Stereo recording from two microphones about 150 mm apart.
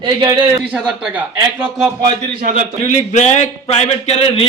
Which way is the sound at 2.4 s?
60° right (ahead or behind).